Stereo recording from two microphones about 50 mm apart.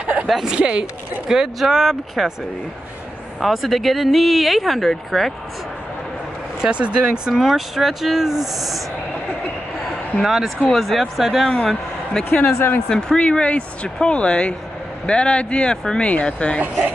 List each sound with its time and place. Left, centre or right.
0.0 s a sound: right
0.3 s speech: centre
0.6 s speech: right
1.3 s speech: centre
3.3 s speech: centre
6.6 s speech: centre
7.3 s speech: centre
10.2 s speech: centre
11.5 s a man's voice: centre
12.4 s speech: left
12.8 s speech: centre